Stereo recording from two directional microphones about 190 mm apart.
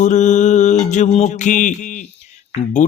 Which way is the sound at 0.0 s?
40° left (ahead or behind).